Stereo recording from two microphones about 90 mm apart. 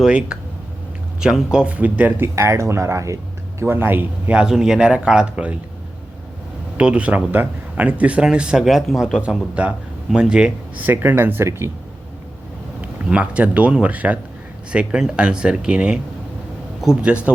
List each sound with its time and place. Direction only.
0.0 s speech: 10° right (ahead or behind)
2.3 s speech: 35° right (ahead or behind)
3.6 s speech: 25° right (ahead or behind)
4.4 s speech: 5° right (ahead or behind)
6.7 s speech: 15° right (ahead or behind)
10.8 s speech: 25° right (ahead or behind)
12.8 s speech: 15° right (ahead or behind)